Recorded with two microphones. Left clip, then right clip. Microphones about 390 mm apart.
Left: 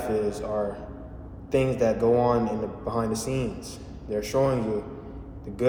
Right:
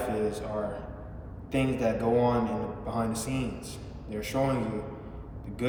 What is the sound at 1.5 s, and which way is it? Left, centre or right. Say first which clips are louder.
A man's voice: left 5 dB; centre.